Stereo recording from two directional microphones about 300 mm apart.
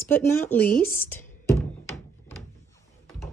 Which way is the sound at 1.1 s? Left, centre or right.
Centre.